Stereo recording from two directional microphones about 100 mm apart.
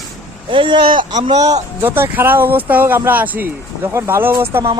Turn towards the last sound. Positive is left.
turn(degrees=-25)  # may be behind; listen again after turning